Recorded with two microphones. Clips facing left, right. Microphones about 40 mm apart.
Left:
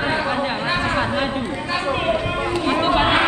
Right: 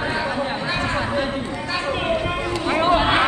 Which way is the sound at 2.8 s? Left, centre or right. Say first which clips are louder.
Right 1 dB; left.